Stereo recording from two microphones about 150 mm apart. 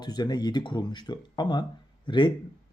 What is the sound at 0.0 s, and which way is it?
A man's voice, 30° left (ahead or behind).